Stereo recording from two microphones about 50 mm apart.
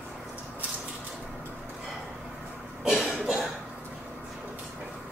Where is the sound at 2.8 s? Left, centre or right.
Centre.